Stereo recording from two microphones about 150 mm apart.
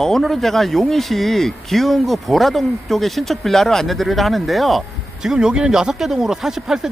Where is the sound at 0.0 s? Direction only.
Centre (ahead or behind).